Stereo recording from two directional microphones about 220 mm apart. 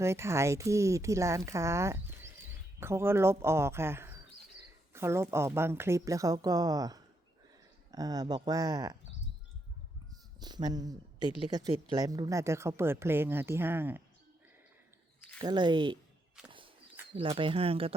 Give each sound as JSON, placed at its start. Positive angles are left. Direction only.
{"t": 0.0, "sound": "speech", "side_deg": -10}
{"t": 10.4, "sound": "speech", "side_deg": -20}
{"t": 15.4, "sound": "speech", "side_deg": -20}
{"t": 17.2, "sound": "speech", "side_deg": -25}